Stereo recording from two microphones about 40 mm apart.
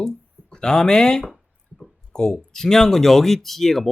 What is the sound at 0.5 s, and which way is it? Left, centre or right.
Speech, centre.